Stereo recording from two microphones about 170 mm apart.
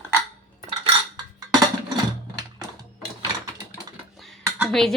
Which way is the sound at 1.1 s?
25° right (ahead or behind).